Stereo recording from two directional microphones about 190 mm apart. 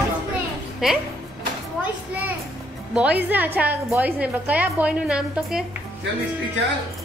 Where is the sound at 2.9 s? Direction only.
5° right (ahead or behind).